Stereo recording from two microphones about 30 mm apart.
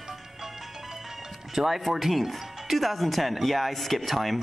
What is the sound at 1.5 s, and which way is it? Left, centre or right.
Speech, centre.